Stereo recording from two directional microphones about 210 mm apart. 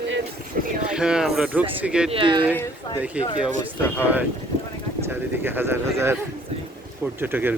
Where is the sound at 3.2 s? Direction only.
5° right (ahead or behind).